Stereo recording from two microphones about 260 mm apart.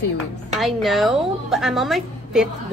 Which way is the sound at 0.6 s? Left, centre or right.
Centre.